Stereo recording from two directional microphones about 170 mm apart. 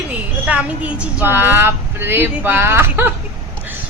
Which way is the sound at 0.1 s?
10° right (ahead or behind).